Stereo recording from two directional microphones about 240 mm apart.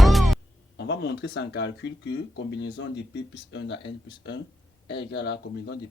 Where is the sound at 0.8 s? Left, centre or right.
Left.